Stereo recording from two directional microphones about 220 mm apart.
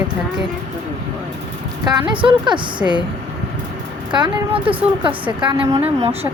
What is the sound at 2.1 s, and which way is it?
Speech, 20° right (ahead or behind).